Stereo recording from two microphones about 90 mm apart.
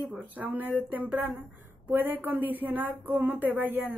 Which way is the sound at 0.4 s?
20° right (ahead or behind).